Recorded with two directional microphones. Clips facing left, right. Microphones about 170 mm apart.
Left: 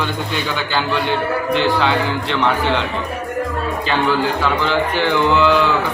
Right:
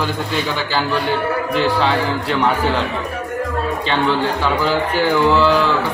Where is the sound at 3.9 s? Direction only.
Centre (ahead or behind).